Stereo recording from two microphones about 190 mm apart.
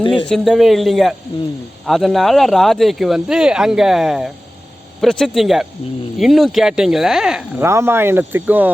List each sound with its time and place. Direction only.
0.0 s speech: 25° left (ahead or behind)
0.3 s speech: centre (ahead or behind)
7.6 s speech: 15° right (ahead or behind)